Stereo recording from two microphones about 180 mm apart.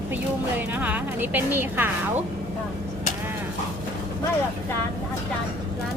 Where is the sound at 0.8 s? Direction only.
10° right (ahead or behind).